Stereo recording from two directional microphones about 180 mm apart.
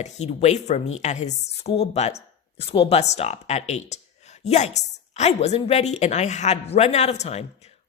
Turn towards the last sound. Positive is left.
turn(degrees=35)  # may be behind; listen again after turning